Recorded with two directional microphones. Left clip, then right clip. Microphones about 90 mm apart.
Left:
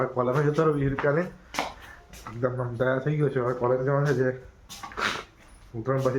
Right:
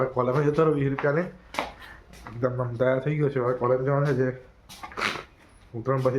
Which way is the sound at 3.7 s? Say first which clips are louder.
Right 1 dB; 25° right (ahead or behind).